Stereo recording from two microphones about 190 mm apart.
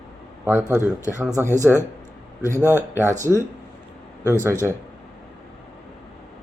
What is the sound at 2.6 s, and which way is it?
Speech, 15° left (ahead or behind).